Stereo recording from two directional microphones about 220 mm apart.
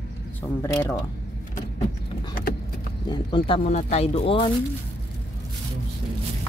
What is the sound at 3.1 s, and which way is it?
Speech, 20° left (ahead or behind).